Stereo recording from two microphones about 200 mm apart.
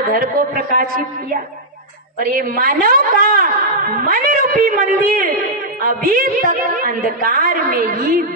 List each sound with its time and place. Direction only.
0.1 s a woman's voice: 45° right (ahead or behind)